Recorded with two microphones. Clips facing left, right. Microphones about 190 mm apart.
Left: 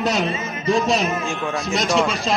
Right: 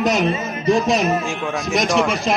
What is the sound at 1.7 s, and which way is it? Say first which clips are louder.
Speech: right 2 dB; 15° right (ahead or behind).